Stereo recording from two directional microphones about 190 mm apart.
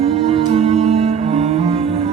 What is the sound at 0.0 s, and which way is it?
Music, 30° right (ahead or behind).